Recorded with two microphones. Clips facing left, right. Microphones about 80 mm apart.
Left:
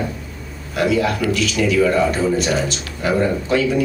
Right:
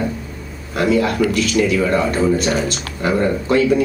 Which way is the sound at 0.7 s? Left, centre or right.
Right.